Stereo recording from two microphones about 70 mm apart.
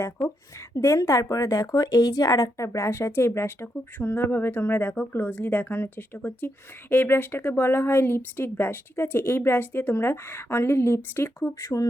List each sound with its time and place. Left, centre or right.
0.7 s a woman's voice: left